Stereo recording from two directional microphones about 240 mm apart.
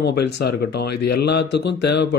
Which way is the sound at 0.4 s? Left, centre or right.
Left.